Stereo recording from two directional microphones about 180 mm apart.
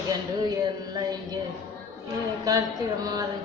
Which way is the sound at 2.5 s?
20° right (ahead or behind).